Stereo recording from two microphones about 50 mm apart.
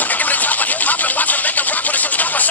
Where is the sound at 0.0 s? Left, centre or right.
Left.